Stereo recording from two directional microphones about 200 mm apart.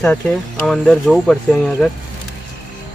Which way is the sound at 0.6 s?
Centre (ahead or behind).